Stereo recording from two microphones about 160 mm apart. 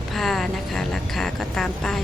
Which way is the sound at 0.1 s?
Centre (ahead or behind).